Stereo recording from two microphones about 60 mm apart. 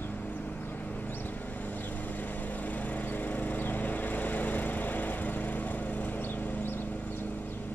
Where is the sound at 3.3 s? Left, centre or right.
Left.